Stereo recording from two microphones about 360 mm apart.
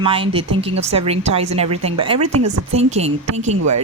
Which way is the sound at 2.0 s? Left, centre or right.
Centre.